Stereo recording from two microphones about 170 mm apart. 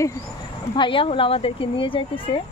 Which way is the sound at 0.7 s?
30° left (ahead or behind).